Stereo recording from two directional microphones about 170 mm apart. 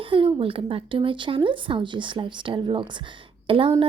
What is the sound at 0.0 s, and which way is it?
A woman's voice, 30° right (ahead or behind).